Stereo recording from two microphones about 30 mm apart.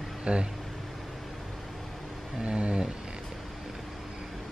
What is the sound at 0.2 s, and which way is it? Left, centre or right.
Speech, right.